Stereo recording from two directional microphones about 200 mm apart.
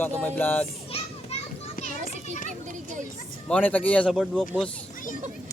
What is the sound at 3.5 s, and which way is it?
Speech, 10° left (ahead or behind).